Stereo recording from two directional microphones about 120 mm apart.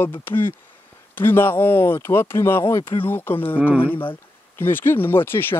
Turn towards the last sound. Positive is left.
turn(degrees=20)  # may be behind; listen again after turning